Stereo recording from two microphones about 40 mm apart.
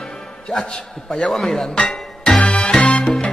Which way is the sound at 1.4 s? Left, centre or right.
Centre.